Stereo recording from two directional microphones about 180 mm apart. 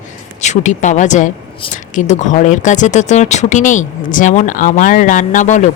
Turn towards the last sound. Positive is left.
turn(degrees=45)  # may be behind; listen again after turning